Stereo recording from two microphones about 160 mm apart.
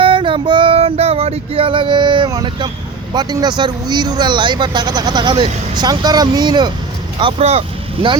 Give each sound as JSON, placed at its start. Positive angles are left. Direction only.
{"t": 0.0, "sound": "female singing", "side_deg": -35}
{"t": 3.1, "sound": "speech", "side_deg": -25}